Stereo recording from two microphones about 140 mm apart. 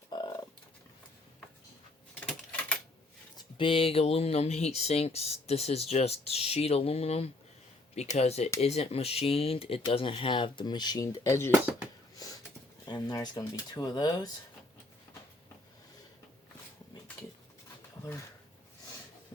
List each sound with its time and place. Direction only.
0.1 s fowl: 35° left (ahead or behind)
2.2 s typing: 10° left (ahead or behind)
3.3 s speech: 35° left (ahead or behind); by 11.5 s 20° left (ahead or behind)
12.1 s a sound: 25° left (ahead or behind)
12.8 s speech: 30° left (ahead or behind)